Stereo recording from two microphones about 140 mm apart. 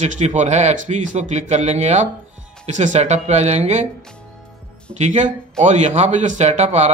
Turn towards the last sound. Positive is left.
turn(degrees=-55)  # may be behind; listen again after turning